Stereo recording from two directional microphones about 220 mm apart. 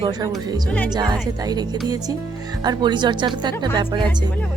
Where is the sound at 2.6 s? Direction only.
20° right (ahead or behind).